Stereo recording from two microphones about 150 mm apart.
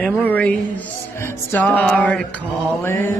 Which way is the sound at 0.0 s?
10° left (ahead or behind).